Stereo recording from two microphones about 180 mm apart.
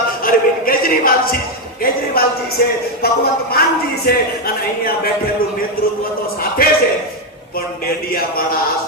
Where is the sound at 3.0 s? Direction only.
60° left (ahead or behind).